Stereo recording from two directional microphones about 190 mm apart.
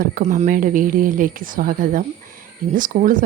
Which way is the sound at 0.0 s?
45° right (ahead or behind).